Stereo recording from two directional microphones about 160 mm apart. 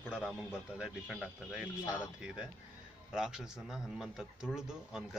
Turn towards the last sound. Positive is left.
turn(degrees=0)  # may be behind; listen again after turning